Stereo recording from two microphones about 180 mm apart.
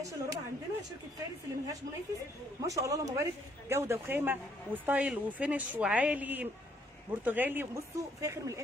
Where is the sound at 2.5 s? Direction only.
20° right (ahead or behind).